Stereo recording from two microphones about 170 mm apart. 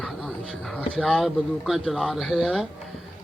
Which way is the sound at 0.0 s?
5° left (ahead or behind).